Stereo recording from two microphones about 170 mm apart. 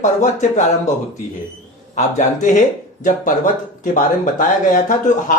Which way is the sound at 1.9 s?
45° left (ahead or behind).